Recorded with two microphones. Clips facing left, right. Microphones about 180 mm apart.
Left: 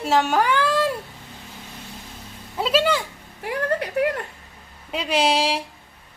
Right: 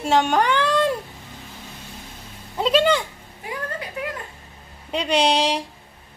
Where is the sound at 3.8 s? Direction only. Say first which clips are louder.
Left 8 dB; 65° left (ahead or behind).